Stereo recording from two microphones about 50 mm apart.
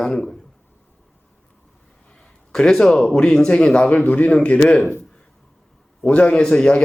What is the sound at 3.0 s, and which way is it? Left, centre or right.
Speech, centre.